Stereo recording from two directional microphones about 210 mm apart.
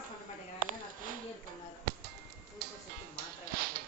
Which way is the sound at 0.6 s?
40° right (ahead or behind).